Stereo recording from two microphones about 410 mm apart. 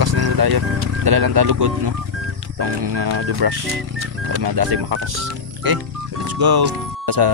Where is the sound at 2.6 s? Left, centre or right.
Right.